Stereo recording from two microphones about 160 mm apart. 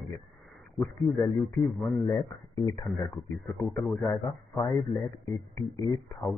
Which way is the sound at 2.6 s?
20° left (ahead or behind).